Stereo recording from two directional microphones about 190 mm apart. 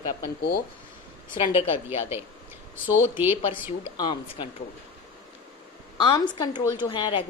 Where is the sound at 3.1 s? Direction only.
10° right (ahead or behind).